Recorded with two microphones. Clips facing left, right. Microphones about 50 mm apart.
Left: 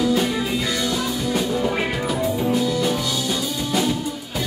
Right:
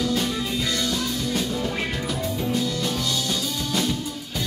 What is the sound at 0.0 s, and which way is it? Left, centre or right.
Music, centre.